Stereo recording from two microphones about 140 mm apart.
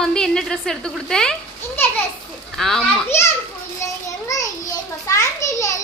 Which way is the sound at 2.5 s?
Centre (ahead or behind).